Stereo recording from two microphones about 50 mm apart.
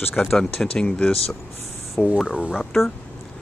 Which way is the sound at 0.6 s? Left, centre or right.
Centre.